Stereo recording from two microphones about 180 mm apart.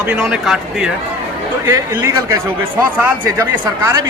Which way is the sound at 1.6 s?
15° right (ahead or behind).